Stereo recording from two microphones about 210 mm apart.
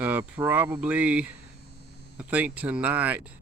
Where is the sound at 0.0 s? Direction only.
10° right (ahead or behind).